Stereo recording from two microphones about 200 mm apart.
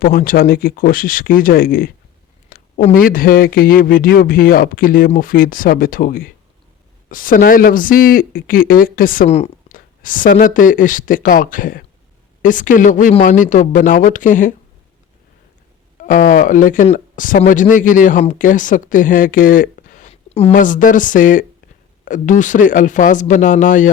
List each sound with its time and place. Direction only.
0.0 s speech: 45° left (ahead or behind)
2.5 s a sound: 45° left (ahead or behind)
2.9 s speech: 45° left (ahead or behind)
16.0 s speech: 40° left (ahead or behind)